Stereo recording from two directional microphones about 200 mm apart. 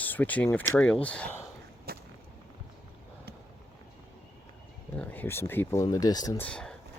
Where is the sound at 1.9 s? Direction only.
50° right (ahead or behind).